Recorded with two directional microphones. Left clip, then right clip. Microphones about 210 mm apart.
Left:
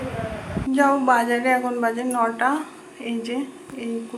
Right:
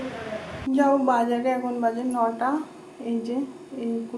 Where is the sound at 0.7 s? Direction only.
5° left (ahead or behind).